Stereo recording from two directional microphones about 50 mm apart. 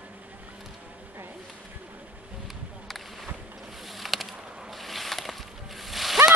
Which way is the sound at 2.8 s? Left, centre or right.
Centre.